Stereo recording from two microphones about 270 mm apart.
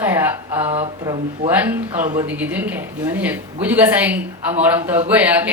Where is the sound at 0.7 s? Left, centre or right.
Right.